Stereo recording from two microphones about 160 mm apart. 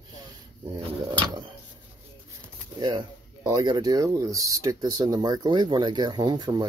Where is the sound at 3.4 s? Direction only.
25° right (ahead or behind).